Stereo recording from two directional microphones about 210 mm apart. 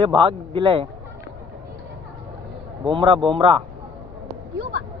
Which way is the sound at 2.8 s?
25° right (ahead or behind).